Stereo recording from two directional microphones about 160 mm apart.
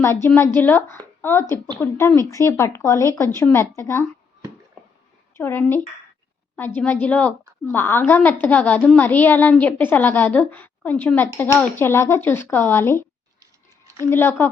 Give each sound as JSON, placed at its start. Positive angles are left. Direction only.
{"t": 0.0, "sound": "a woman's voice", "side_deg": 15}
{"t": 5.3, "sound": "a woman's voice", "side_deg": 15}
{"t": 13.4, "sound": "a sound", "side_deg": -20}
{"t": 14.0, "sound": "a woman's voice", "side_deg": 15}